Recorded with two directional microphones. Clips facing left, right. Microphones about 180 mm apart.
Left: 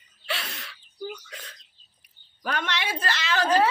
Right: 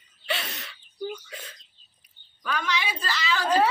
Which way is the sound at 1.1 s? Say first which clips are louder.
Right 2 dB; 5° right (ahead or behind).